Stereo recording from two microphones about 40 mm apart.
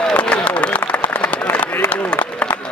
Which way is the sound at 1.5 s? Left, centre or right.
Left.